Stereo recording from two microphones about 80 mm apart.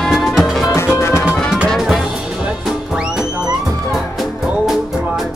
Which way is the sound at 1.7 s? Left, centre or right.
Centre.